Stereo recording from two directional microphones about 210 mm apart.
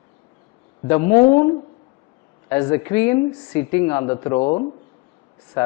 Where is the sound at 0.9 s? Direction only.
15° left (ahead or behind).